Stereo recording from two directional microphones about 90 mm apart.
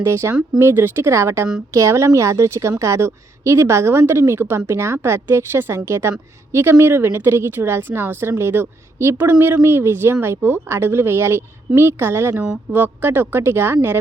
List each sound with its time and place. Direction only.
0.0 s a woman's voice: 30° right (ahead or behind)